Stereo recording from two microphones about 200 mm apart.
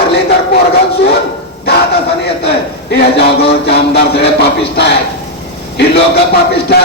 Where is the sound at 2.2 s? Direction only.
55° left (ahead or behind).